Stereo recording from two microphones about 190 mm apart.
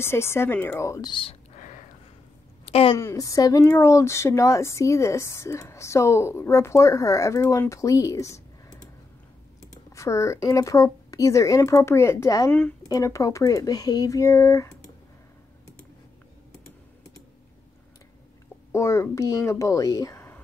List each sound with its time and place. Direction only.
0.0 s speech: 15° left (ahead or behind)
1.5 s whispering: 40° left (ahead or behind)
2.6 s a sound: 30° left (ahead or behind)
3.0 s speech: 15° left (ahead or behind)
9.9 s speech: 15° left (ahead or behind)
18.7 s a child's voice: 15° left (ahead or behind)